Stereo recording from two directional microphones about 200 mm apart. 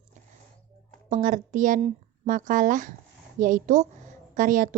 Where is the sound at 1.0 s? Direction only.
40° right (ahead or behind).